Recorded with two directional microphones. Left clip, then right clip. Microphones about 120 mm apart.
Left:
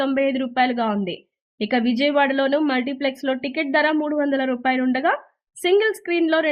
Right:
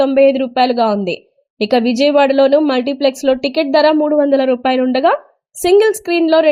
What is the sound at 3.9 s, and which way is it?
A woman's voice, 30° right (ahead or behind).